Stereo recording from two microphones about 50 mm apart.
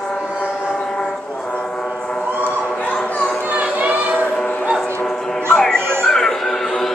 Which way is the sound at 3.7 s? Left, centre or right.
Right.